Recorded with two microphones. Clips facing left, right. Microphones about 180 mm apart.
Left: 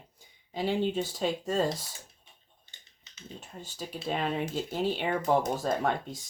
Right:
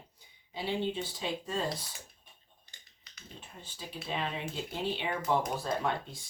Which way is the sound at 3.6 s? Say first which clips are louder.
Left 5 dB; 45° left (ahead or behind).